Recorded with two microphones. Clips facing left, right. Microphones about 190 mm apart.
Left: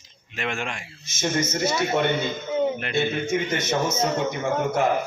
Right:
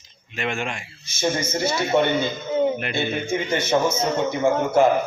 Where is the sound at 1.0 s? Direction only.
30° right (ahead or behind).